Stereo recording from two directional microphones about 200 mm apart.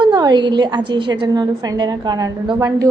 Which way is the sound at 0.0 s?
20° right (ahead or behind).